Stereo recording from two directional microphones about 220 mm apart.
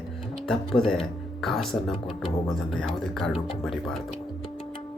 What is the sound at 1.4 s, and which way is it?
Speech, centre (ahead or behind).